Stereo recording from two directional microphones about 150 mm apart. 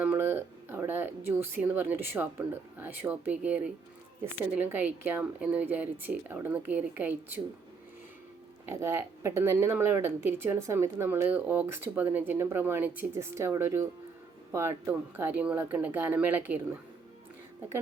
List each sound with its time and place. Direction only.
0.0 s a sound: 10° right (ahead or behind)
2.7 s speech: 10° right (ahead or behind)
8.7 s speech: 20° right (ahead or behind)